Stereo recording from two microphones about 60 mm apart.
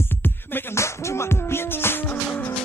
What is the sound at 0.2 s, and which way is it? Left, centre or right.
Music, left.